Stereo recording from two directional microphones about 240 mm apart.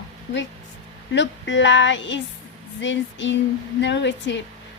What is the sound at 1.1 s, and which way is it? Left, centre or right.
Speech, left.